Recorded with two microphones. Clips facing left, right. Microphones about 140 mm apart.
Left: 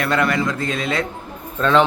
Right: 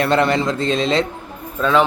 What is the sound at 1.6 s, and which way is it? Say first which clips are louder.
Speech: even; 5° right (ahead or behind).